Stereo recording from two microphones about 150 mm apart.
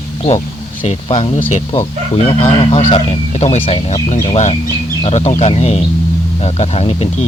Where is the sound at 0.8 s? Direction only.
40° left (ahead or behind).